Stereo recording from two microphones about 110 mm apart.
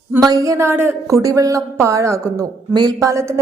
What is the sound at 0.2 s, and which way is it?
A woman's voice, 30° right (ahead or behind).